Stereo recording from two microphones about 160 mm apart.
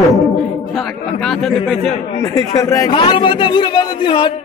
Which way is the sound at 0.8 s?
Centre (ahead or behind).